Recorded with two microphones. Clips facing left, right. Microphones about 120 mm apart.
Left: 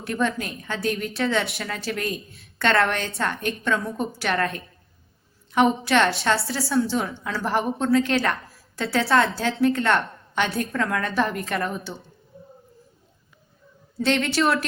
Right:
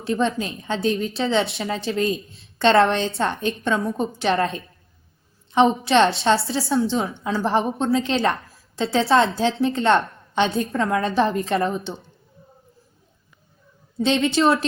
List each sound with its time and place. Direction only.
0.0 s a woman's voice: 25° right (ahead or behind)
14.0 s a woman's voice: 20° right (ahead or behind)